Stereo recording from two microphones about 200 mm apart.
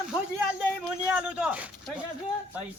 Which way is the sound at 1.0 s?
5° right (ahead or behind).